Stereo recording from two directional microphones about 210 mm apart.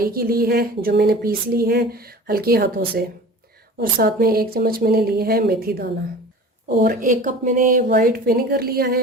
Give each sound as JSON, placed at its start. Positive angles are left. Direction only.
{"t": 0.0, "sound": "speech", "side_deg": -45}